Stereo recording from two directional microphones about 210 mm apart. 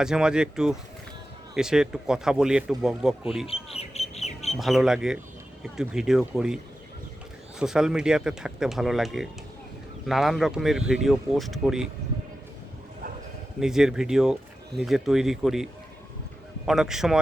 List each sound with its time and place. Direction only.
0.0 s speech: 5° right (ahead or behind)
3.4 s bird: 30° left (ahead or behind)
4.5 s speech: centre (ahead or behind)
7.6 s speech: 5° right (ahead or behind)
13.6 s speech: 5° right (ahead or behind)